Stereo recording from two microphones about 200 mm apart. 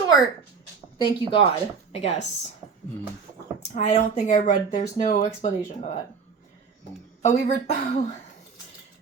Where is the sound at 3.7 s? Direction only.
35° left (ahead or behind).